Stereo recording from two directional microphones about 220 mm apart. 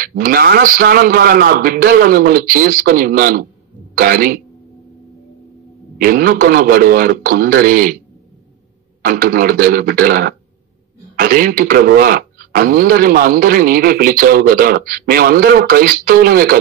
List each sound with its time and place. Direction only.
0.0 s a man's voice: 40° right (ahead or behind)
5.9 s a man's voice: 40° right (ahead or behind)
9.0 s a man's voice: 40° right (ahead or behind)